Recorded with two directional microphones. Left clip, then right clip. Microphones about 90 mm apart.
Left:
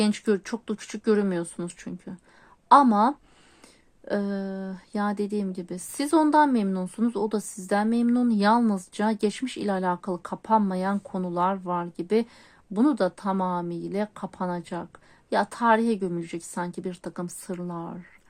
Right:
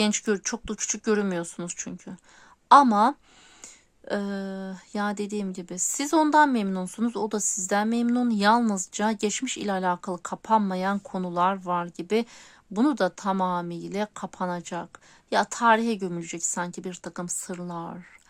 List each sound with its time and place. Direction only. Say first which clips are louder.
0.0 s a woman's voice: even; 35° right (ahead or behind)
16.0 s speech: left 1 dB; 45° right (ahead or behind)